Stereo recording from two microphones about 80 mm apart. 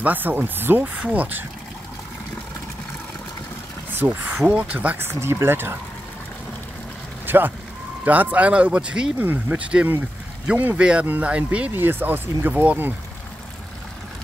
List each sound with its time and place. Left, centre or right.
0.0 s speech: right
3.9 s speech: right
4.9 s speech: right
7.2 s speech: right
9.2 s speech: right